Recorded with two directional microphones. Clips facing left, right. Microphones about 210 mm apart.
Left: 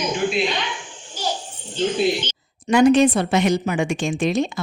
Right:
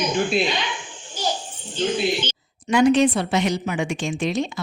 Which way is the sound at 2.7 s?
45° left (ahead or behind).